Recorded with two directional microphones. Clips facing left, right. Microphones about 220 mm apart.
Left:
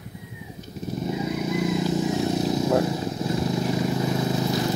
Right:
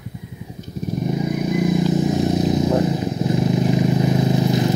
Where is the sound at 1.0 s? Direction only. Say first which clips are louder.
Right 4 dB; 15° right (ahead or behind).